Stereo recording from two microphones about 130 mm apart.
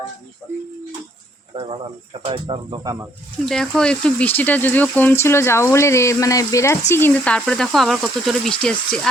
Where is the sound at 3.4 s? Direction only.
5° left (ahead or behind); by 6.7 s 25° left (ahead or behind).